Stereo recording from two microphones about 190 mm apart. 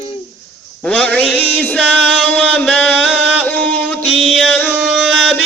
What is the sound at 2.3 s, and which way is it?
Music, 10° left (ahead or behind).